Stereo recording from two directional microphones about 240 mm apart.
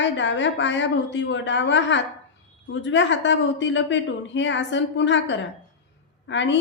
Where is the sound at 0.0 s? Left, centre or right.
Left.